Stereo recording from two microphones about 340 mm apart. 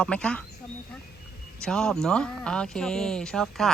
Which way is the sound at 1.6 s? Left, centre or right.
Centre.